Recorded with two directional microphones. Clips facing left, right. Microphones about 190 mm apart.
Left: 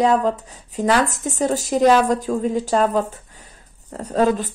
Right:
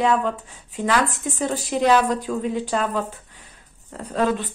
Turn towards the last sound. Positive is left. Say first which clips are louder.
# left 4 dB
turn(degrees=40)  # may be behind; listen again after turning